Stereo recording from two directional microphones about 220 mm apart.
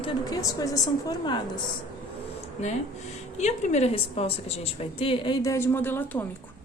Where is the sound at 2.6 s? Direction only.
30° left (ahead or behind); by 6.2 s 10° left (ahead or behind).